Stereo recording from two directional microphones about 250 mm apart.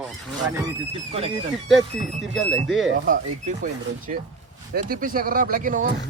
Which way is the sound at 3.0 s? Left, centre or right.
Right.